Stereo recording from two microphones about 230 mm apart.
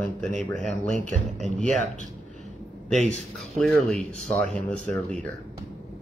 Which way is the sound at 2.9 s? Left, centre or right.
Centre.